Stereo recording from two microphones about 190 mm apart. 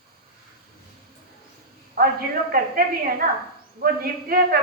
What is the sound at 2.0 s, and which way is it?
A woman's voice, 50° right (ahead or behind).